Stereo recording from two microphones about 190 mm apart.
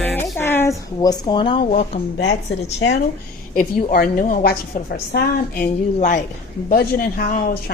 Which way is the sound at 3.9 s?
50° left (ahead or behind).